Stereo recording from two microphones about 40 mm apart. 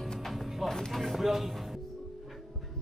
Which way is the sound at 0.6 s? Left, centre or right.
Centre.